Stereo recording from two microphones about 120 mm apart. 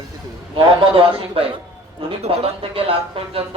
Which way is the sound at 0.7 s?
45° right (ahead or behind).